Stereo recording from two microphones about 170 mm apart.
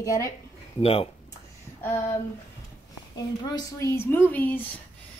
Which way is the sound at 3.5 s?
20° left (ahead or behind).